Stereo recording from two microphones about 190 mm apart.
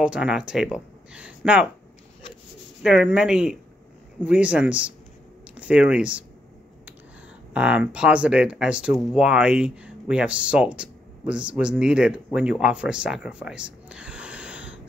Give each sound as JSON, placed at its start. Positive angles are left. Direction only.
{"t": 0.0, "sound": "speech", "side_deg": -5}
{"t": 2.8, "sound": "speech", "side_deg": -5}
{"t": 7.5, "sound": "speech", "side_deg": -5}